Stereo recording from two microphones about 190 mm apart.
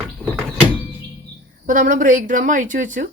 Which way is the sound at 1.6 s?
45° right (ahead or behind).